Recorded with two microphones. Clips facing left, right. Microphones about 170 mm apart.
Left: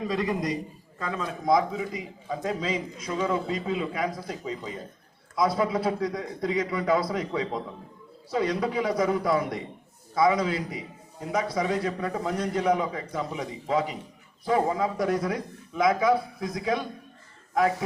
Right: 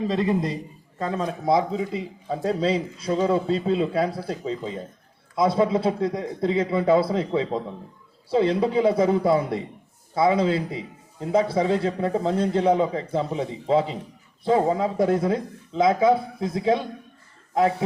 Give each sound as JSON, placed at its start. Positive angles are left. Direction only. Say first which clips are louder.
{"t": 0.1, "sound": "a man's voice", "louder": "right 1 dB", "side_deg": -25}